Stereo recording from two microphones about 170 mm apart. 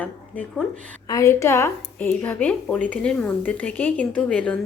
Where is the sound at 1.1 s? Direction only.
20° left (ahead or behind).